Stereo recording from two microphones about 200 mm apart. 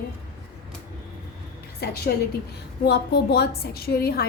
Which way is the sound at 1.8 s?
50° left (ahead or behind).